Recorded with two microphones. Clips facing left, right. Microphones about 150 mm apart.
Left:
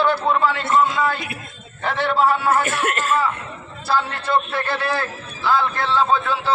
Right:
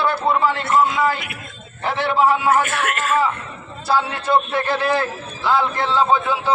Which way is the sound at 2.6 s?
35° left (ahead or behind).